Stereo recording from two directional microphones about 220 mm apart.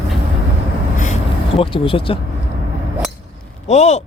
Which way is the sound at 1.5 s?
25° left (ahead or behind).